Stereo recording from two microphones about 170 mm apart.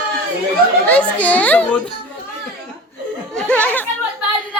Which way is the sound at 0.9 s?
10° left (ahead or behind).